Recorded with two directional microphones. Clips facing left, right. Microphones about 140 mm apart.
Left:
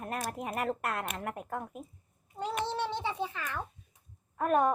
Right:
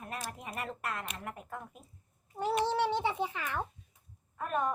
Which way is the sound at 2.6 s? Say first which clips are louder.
Right 3 dB; 15° right (ahead or behind).